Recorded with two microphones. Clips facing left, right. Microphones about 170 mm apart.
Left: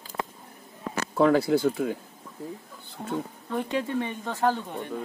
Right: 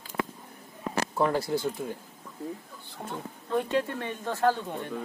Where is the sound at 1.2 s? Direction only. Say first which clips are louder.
Left 7 dB; 90° left.